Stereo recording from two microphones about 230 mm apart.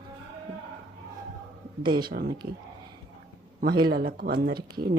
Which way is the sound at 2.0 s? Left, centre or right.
Right.